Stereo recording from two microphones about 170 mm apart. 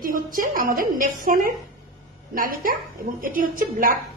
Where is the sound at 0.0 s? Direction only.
55° right (ahead or behind).